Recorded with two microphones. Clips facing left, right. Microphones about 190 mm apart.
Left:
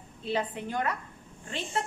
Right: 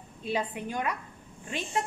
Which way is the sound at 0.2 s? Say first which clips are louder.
Even; 15° right (ahead or behind).